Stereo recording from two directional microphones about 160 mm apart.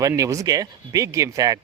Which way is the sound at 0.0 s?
20° right (ahead or behind).